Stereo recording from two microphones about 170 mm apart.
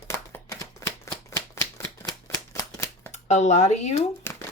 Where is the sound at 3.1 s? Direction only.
45° left (ahead or behind).